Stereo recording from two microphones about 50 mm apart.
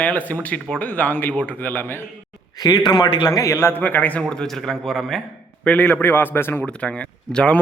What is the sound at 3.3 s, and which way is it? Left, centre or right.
Speech, left.